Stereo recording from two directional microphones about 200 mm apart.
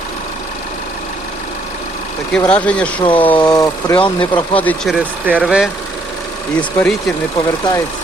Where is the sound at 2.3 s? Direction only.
5° left (ahead or behind).